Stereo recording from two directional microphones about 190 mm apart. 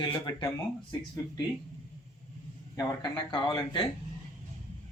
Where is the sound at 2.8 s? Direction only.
20° left (ahead or behind).